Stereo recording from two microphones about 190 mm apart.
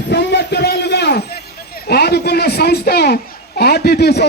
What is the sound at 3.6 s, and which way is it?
Speech, 55° left (ahead or behind).